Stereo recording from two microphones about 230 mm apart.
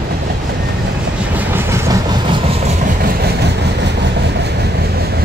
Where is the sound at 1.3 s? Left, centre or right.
Centre.